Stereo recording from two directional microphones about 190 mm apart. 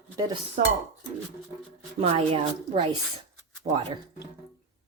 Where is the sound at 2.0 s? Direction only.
30° right (ahead or behind).